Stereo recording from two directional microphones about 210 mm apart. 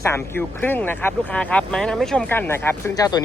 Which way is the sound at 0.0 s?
10° left (ahead or behind).